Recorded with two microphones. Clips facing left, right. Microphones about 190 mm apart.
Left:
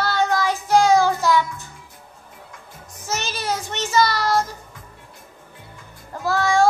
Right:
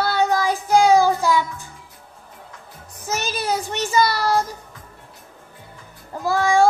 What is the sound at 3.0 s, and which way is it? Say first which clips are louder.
Child singing: right 2 dB; 10° right (ahead or behind).